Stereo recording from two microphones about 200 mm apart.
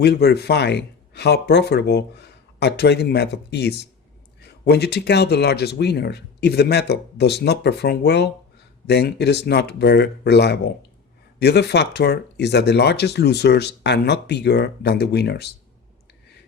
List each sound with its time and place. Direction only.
0.0 s speech: 55° left (ahead or behind)